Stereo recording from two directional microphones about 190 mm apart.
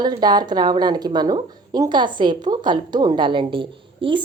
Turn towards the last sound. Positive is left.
turn(degrees=-25)  # may be behind; listen again after turning